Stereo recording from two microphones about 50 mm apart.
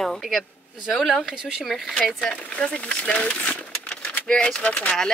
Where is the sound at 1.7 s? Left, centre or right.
Centre.